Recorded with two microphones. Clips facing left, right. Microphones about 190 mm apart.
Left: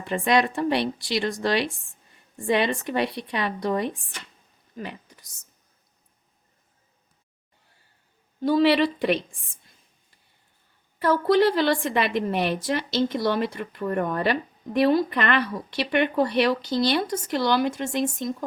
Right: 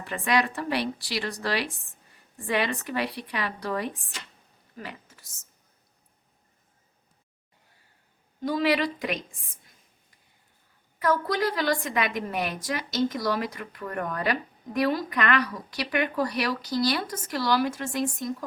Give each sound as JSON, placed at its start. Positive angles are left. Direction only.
{"t": 0.0, "sound": "a woman's voice", "side_deg": 25}
{"t": 8.4, "sound": "a woman's voice", "side_deg": 30}
{"t": 11.0, "sound": "a woman's voice", "side_deg": 30}